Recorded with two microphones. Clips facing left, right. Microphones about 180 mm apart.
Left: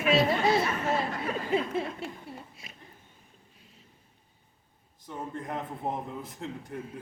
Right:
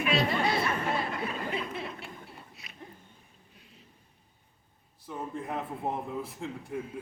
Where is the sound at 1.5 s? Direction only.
30° left (ahead or behind).